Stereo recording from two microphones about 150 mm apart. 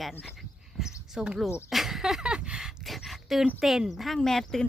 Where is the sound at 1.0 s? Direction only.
5° right (ahead or behind).